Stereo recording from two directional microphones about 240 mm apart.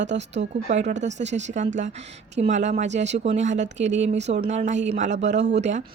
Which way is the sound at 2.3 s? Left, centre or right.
Right.